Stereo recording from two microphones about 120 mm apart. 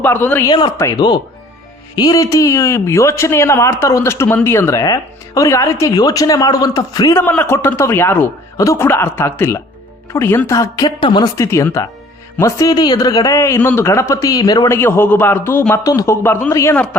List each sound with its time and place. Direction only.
0.0 s a man's voice: 15° left (ahead or behind)
0.4 s a man's voice: 40° left (ahead or behind)
7.2 s speech: 15° left (ahead or behind)
8.5 s speech: 25° left (ahead or behind)
11.0 s a man's voice: 40° left (ahead or behind)
11.3 s a man's voice: 25° left (ahead or behind)
14.7 s speech: 20° left (ahead or behind)
15.7 s speech: 30° left (ahead or behind)
16.2 s speech: 20° left (ahead or behind)
16.7 s a man's voice: 10° left (ahead or behind)